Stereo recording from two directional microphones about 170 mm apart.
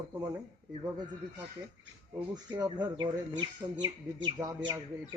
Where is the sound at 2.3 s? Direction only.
25° right (ahead or behind).